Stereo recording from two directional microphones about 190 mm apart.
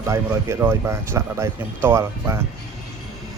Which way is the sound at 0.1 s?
15° right (ahead or behind).